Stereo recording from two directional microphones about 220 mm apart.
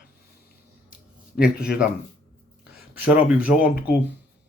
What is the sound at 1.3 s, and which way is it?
Speech, 5° right (ahead or behind).